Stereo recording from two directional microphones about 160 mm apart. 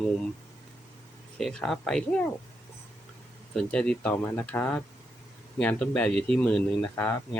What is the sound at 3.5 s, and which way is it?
Speech, 5° left (ahead or behind).